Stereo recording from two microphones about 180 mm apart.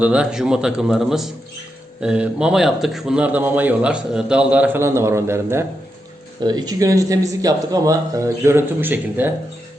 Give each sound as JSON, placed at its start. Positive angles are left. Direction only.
{"t": 0.0, "sound": "a man's voice", "side_deg": -5}